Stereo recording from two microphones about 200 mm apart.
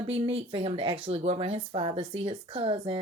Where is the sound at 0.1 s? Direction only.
30° right (ahead or behind).